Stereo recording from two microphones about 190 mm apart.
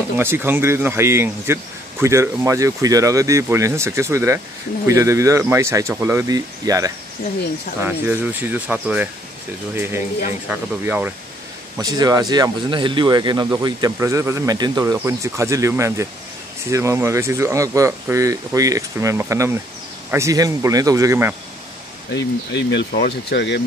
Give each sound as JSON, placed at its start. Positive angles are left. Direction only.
{"t": 0.2, "sound": "speech", "side_deg": -10}
{"t": 10.5, "sound": "speech", "side_deg": -10}
{"t": 11.8, "sound": "speech", "side_deg": -20}
{"t": 22.1, "sound": "speech", "side_deg": 65}